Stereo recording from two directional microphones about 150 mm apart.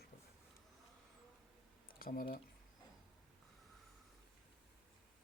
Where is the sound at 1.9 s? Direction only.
75° left (ahead or behind).